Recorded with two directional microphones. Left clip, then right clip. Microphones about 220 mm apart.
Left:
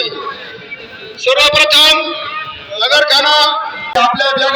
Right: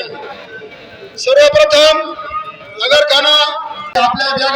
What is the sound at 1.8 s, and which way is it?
Speech, 55° right (ahead or behind).